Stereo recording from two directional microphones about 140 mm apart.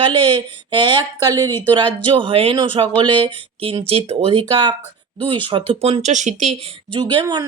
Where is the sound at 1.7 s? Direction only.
35° right (ahead or behind).